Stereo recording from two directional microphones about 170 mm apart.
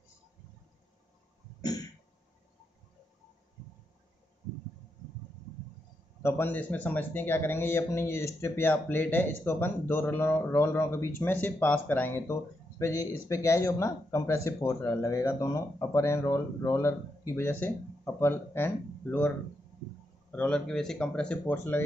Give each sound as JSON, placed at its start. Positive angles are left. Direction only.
{"t": 1.6, "sound": "cough", "side_deg": 20}
{"t": 6.2, "sound": "speech", "side_deg": 10}